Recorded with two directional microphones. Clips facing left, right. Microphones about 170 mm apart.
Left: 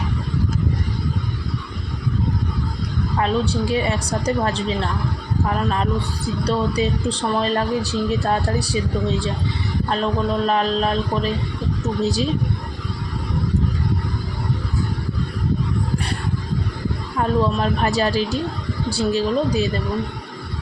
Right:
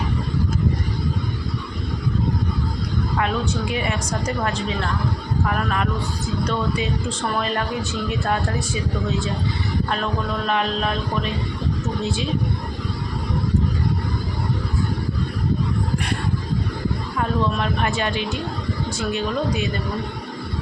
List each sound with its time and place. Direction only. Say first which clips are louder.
3.2 s a woman's voice: left 4 dB; 30° left (ahead or behind)
17.2 s a woman's voice: left 4 dB; 35° left (ahead or behind)